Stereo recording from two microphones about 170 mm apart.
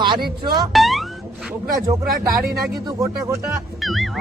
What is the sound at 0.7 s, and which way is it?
Music, centre (ahead or behind).